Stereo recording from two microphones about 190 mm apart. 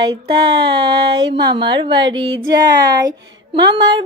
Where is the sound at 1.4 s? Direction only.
25° right (ahead or behind).